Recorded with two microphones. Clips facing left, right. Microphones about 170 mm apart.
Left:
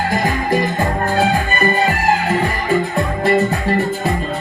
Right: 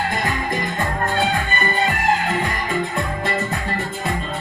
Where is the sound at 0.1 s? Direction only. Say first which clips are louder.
Left 6 dB; 35° left (ahead or behind).